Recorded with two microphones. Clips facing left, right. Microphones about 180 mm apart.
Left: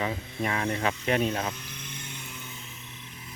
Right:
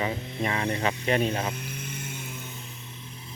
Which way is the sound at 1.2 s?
10° right (ahead or behind).